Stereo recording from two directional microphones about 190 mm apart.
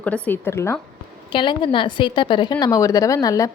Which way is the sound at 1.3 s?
25° left (ahead or behind).